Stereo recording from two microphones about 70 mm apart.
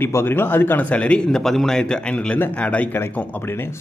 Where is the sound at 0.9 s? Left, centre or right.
Centre.